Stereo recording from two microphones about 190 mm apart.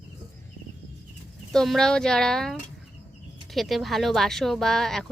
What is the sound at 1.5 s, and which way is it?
Speech, 5° left (ahead or behind).